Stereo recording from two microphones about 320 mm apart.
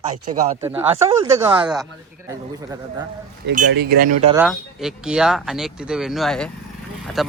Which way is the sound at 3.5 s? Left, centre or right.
Right.